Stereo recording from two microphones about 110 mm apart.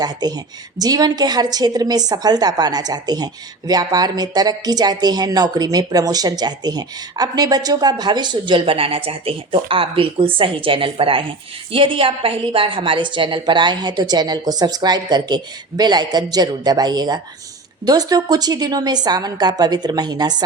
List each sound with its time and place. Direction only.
0.0 s a woman's voice: 40° right (ahead or behind)